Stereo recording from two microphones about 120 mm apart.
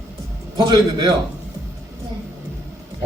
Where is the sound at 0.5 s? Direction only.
35° right (ahead or behind).